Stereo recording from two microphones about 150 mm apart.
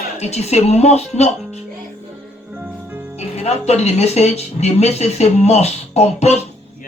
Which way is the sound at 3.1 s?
45° left (ahead or behind).